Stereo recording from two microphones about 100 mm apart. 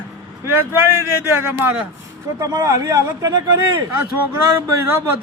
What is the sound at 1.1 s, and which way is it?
A man's voice, 25° right (ahead or behind).